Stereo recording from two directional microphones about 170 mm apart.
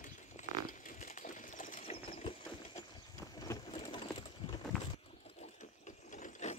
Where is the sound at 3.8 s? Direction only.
30° left (ahead or behind).